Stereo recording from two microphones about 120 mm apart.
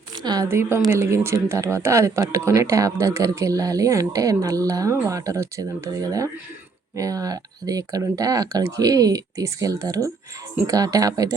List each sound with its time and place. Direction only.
0.2 s speech: 35° right (ahead or behind)
0.4 s speech: 20° right (ahead or behind)